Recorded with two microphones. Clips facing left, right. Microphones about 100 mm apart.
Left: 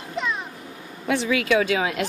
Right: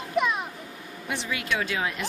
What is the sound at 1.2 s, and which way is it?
Speech, 90° left.